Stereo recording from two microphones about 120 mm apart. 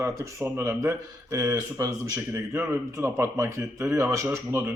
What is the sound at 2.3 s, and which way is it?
A man's voice, 20° right (ahead or behind).